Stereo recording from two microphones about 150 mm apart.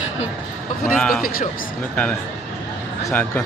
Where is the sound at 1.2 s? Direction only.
75° left (ahead or behind).